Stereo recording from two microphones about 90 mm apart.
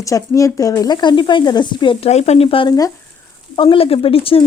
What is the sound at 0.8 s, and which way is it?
Speech, 50° left (ahead or behind).